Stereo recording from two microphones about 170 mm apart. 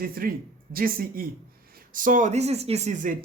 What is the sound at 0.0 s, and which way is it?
A woman's voice, 60° right (ahead or behind).